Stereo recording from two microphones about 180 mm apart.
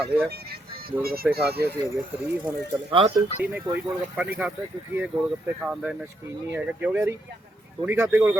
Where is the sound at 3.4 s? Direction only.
10° right (ahead or behind).